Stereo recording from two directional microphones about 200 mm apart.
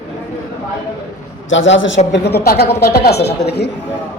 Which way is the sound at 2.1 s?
55° left (ahead or behind).